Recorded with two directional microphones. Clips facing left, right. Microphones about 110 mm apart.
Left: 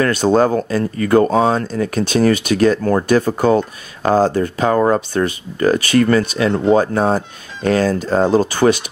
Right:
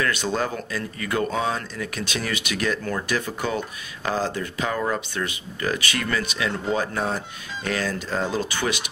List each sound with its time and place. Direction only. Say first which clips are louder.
0.0 s speech: left 11 dB; 40° left (ahead or behind)